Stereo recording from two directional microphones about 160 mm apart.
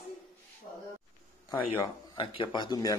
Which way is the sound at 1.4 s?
25° left (ahead or behind).